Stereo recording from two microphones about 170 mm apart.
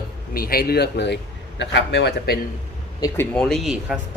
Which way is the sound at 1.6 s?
90° left.